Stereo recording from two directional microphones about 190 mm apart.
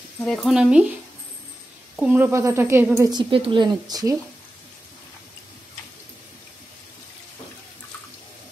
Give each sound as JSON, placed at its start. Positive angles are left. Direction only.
{"t": 0.2, "sound": "speech", "side_deg": 5}
{"t": 2.0, "sound": "speech", "side_deg": -10}